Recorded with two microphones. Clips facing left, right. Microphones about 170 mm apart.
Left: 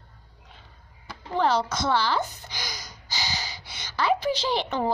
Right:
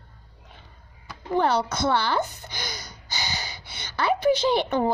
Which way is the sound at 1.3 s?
55° right (ahead or behind).